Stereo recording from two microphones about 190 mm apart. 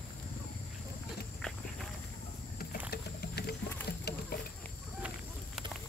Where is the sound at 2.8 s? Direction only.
55° left (ahead or behind).